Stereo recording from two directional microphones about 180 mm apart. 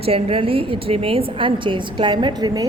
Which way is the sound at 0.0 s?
35° right (ahead or behind).